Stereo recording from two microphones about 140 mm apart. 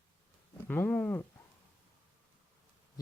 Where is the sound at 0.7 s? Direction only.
10° left (ahead or behind).